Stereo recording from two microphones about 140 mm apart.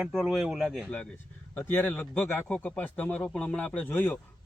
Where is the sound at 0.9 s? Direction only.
10° left (ahead or behind).